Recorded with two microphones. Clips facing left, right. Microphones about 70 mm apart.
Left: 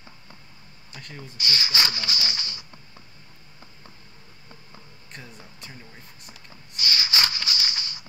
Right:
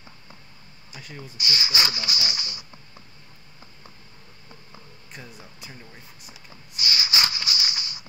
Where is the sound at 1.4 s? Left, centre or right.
Centre.